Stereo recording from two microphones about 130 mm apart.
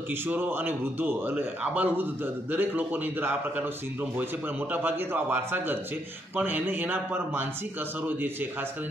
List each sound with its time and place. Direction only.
0.3 s a man's voice: 15° right (ahead or behind)
4.7 s a man's voice: 15° right (ahead or behind)